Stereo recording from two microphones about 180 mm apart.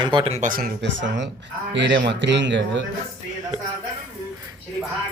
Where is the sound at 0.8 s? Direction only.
90° right.